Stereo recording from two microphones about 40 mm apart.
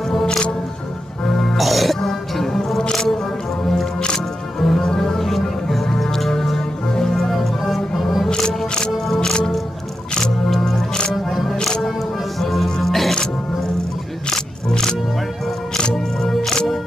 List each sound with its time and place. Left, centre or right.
0.1 s music: centre
4.6 s music: centre
4.8 s music: centre
5.7 s music: centre
7.2 s music: centre
8.3 s music: left
8.9 s music: centre
9.3 s music: left
11.2 s music: centre
14.3 s music: centre
15.9 s music: centre